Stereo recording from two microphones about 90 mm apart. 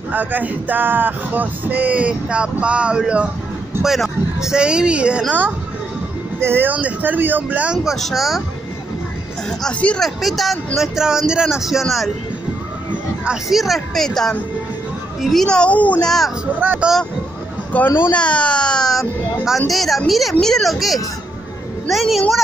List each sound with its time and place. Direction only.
0.1 s speech: 20° right (ahead or behind)
6.4 s speech: 25° right (ahead or behind); by 8.4 s centre (ahead or behind)
9.5 s speech: 10° left (ahead or behind)
10.0 s speech: centre (ahead or behind)
13.2 s speech: 5° right (ahead or behind); by 16.1 s 15° left (ahead or behind)
16.5 s speech: 20° right (ahead or behind)
17.7 s speech: 25° left (ahead or behind)
18.1 s speech: 15° left (ahead or behind)